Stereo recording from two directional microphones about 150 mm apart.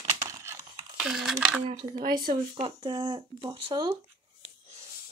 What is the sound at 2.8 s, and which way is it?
Speech, 30° right (ahead or behind).